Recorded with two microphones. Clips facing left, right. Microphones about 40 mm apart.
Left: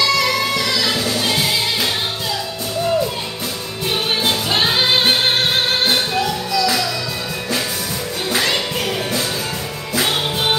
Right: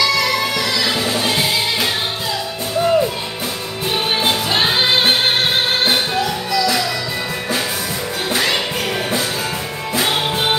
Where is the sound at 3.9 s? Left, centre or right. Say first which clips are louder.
Right 1 dB; centre.